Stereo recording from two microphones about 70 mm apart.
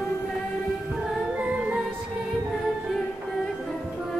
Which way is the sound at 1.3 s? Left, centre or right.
Centre.